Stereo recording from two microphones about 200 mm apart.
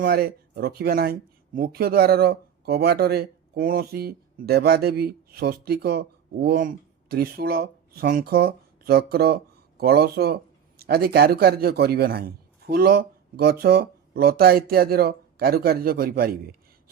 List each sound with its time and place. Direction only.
0.0 s speech: 50° right (ahead or behind)